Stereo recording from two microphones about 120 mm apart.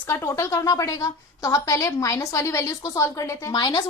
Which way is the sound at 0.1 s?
25° left (ahead or behind).